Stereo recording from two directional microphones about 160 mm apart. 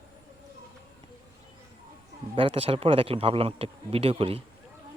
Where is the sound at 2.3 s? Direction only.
35° right (ahead or behind).